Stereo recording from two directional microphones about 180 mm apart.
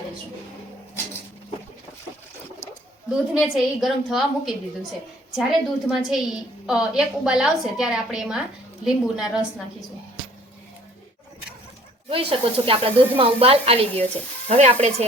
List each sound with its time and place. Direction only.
3.3 s a woman's voice: 5° right (ahead or behind)
12.0 s speech: 30° right (ahead or behind)